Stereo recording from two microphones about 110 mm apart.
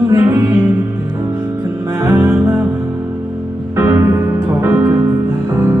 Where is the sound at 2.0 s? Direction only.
20° right (ahead or behind).